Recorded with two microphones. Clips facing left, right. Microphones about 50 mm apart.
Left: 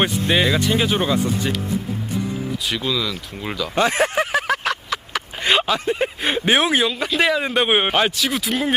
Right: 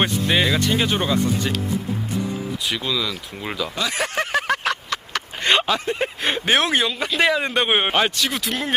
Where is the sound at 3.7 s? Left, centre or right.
Left.